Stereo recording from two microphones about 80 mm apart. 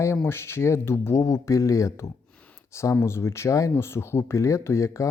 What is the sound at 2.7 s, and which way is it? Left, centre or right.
Speech, left.